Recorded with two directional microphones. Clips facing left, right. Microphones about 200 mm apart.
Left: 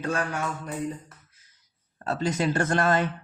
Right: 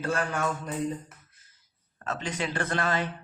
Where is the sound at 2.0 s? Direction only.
35° left (ahead or behind).